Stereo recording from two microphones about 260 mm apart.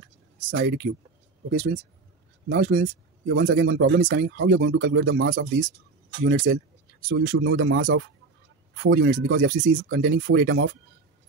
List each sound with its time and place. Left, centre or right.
0.5 s speech: right
2.5 s speech: right
6.2 s speech: right
7.1 s speech: right